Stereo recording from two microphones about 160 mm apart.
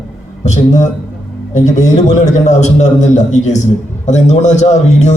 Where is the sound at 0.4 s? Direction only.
45° left (ahead or behind).